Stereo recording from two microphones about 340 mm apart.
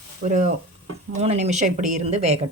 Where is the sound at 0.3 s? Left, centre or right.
Right.